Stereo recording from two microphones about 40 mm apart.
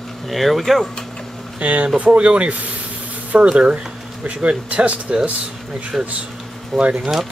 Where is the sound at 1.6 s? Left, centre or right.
Right.